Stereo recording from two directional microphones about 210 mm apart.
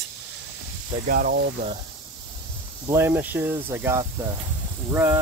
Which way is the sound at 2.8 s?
10° right (ahead or behind).